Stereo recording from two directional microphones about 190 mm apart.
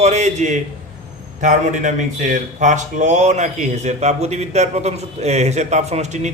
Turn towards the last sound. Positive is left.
turn(degrees=-35)  # may be behind; listen again after turning